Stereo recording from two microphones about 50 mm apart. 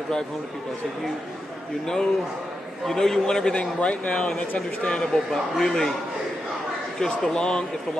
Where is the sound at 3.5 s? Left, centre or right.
Left.